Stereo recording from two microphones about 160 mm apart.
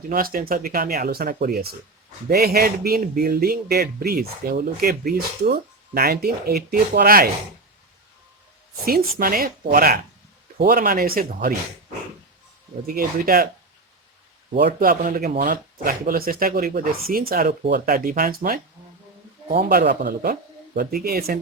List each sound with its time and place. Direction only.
0.1 s speech: 65° right (ahead or behind)
8.8 s speech: 65° right (ahead or behind)
12.9 s speech: 65° right (ahead or behind)
14.6 s speech: 60° right (ahead or behind)
19.6 s speech: 80° right